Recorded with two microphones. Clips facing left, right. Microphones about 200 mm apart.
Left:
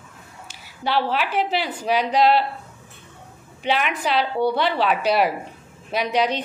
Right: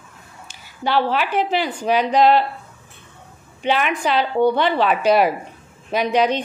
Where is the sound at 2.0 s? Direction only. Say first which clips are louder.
Right 3 dB; 45° right (ahead or behind).